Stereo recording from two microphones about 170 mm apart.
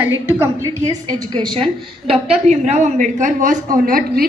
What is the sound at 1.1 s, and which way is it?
Speech, 25° right (ahead or behind).